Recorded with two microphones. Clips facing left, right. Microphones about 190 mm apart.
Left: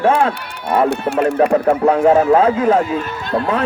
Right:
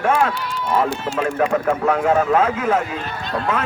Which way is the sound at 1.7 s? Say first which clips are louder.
Left 5 dB; 30° left (ahead or behind).